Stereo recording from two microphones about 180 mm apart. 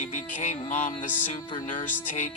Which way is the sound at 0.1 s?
40° left (ahead or behind).